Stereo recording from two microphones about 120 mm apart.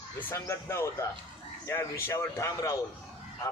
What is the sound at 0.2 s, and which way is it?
Speech, 20° left (ahead or behind).